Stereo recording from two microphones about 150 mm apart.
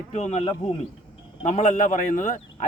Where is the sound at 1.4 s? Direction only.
55° left (ahead or behind).